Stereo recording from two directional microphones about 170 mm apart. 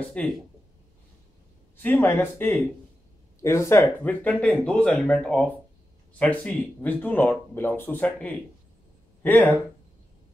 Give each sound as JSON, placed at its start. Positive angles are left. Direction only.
{"t": 0.1, "sound": "speech", "side_deg": 5}
{"t": 1.8, "sound": "speech", "side_deg": 10}